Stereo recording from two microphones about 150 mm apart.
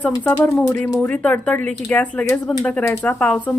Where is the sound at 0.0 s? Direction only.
15° left (ahead or behind).